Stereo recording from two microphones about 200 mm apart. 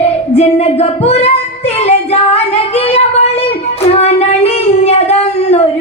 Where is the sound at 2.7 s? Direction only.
30° left (ahead or behind).